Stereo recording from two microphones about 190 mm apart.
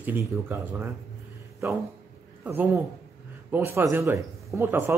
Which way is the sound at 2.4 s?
10° right (ahead or behind).